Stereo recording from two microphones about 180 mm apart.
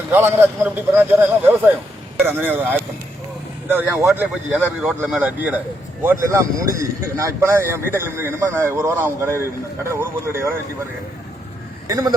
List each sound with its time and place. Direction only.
0.1 s a man's voice: 15° right (ahead or behind)
11.9 s speech: 20° right (ahead or behind)